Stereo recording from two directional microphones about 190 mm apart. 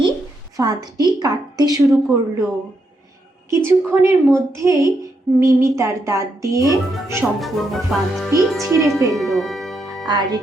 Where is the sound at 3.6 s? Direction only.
15° right (ahead or behind).